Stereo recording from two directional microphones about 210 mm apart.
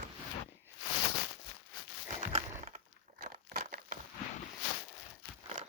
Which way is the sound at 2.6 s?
35° right (ahead or behind).